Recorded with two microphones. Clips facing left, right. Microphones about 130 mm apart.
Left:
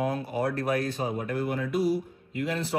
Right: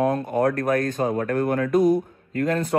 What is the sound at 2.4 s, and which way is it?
Speech, 45° right (ahead or behind).